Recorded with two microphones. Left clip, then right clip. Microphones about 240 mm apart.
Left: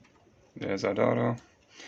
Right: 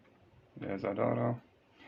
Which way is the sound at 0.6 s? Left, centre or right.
Left.